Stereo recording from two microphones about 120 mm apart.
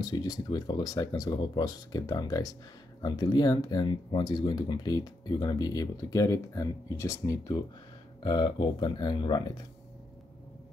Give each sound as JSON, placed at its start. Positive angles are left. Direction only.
{"t": 0.0, "sound": "speech", "side_deg": 35}
{"t": 8.2, "sound": "speech", "side_deg": 40}